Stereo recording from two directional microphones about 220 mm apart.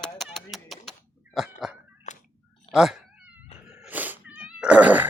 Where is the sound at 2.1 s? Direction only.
30° left (ahead or behind).